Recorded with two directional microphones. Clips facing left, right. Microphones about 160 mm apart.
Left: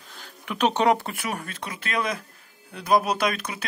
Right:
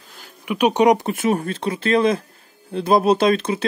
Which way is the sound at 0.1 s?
5° right (ahead or behind).